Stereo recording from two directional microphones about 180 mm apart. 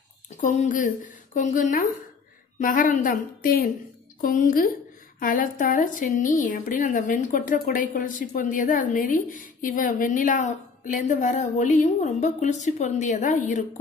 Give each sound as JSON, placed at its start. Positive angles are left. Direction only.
{"t": 0.4, "sound": "a woman's voice", "side_deg": 45}